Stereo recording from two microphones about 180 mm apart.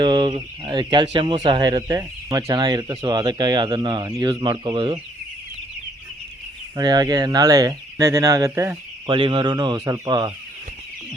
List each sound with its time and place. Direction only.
0.0 s speech: 25° right (ahead or behind)
6.7 s speech: 20° right (ahead or behind)
9.0 s speech: 30° right (ahead or behind)